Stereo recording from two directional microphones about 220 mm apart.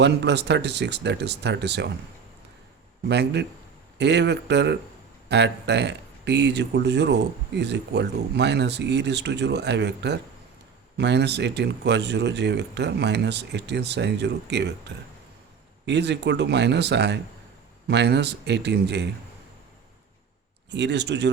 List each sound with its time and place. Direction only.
0.0 s speech: 50° right (ahead or behind)
3.1 s speech: 50° right (ahead or behind)
20.7 s speech: 50° right (ahead or behind)